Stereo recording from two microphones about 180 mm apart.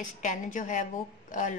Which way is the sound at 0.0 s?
45° left (ahead or behind).